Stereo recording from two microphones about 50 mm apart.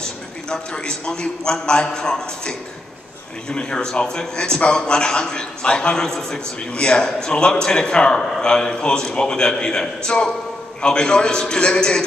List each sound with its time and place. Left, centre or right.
0.0 s a man's voice: centre